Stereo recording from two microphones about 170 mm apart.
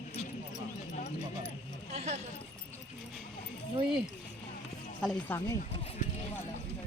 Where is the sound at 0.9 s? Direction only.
45° left (ahead or behind).